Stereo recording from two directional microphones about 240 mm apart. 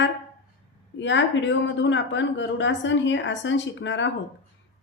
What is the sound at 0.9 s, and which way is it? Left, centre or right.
Speech, left.